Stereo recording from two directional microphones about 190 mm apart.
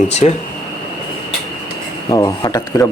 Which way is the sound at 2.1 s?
20° left (ahead or behind).